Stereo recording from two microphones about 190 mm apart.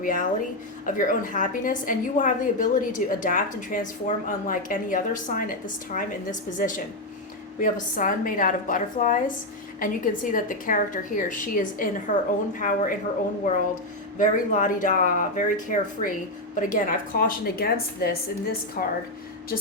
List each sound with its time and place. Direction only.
0.0 s a woman's voice: 45° left (ahead or behind)
14.2 s a woman's voice: 40° left (ahead or behind)